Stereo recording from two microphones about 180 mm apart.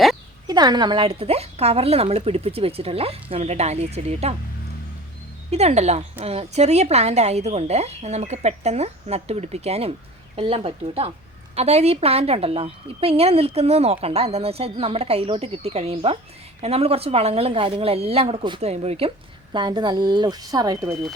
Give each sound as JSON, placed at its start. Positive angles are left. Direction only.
{"t": 0.4, "sound": "a woman's voice", "side_deg": -25}
{"t": 5.5, "sound": "a woman's voice", "side_deg": -35}